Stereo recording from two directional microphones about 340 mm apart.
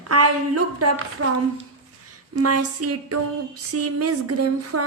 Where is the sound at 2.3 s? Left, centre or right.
Right.